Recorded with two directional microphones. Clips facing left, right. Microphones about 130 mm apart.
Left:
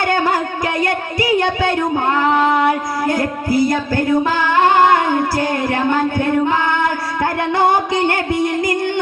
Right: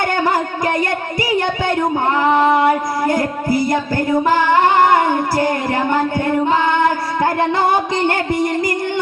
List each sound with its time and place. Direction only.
3.1 s music: 20° right (ahead or behind)